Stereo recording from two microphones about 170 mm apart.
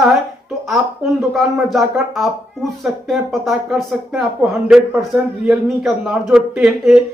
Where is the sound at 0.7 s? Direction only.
Centre (ahead or behind).